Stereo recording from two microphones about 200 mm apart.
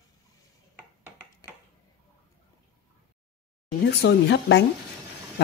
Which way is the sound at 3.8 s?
60° left (ahead or behind).